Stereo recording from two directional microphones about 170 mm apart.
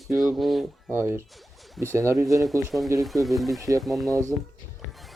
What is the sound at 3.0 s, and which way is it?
Speech, centre (ahead or behind).